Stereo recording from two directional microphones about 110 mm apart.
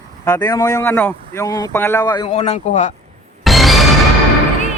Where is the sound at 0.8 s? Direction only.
15° left (ahead or behind).